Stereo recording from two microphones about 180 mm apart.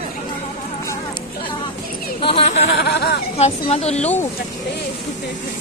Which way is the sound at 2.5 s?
75° left (ahead or behind).